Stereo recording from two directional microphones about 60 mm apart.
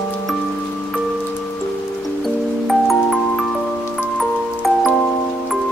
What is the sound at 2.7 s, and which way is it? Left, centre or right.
Music, centre.